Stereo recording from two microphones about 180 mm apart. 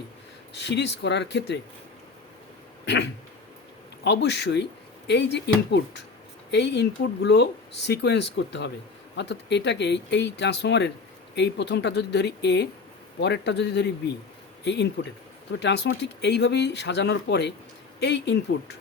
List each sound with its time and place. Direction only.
0.5 s speech: 75° left (ahead or behind)
2.8 s speech: 75° left (ahead or behind)